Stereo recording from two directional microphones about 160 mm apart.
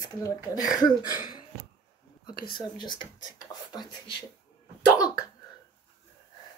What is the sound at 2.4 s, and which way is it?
Speech, 30° left (ahead or behind).